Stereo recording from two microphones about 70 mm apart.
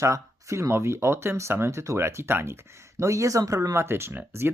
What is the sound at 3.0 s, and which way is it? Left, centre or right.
Speech, right.